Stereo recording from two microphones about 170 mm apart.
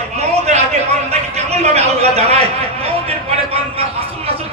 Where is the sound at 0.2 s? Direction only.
40° right (ahead or behind).